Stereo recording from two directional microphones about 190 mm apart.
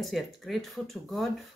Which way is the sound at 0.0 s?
Centre (ahead or behind).